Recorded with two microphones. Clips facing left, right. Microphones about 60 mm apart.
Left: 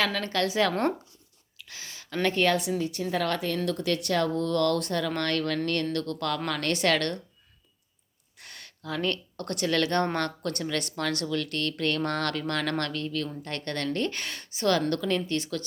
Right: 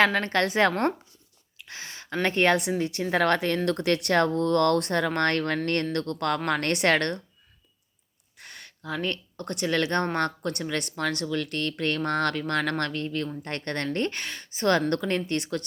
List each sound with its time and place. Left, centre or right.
0.0 s speech: right
1.6 s a sound: right
2.0 s speech: right
2.6 s a woman's voice: right
8.4 s speech: centre; by 14.2 s right
14.2 s a woman's voice: centre
14.5 s speech: right